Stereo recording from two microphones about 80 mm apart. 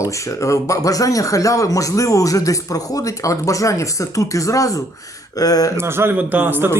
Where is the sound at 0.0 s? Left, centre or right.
Left.